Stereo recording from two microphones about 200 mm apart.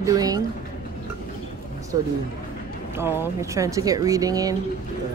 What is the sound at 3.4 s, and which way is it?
Speech, 15° right (ahead or behind).